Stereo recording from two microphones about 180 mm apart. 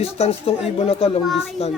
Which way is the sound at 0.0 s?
35° left (ahead or behind).